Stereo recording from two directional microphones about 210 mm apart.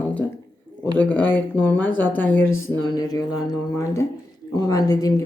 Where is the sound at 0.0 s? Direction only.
5° left (ahead or behind).